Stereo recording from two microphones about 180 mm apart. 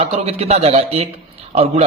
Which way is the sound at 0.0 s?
35° right (ahead or behind).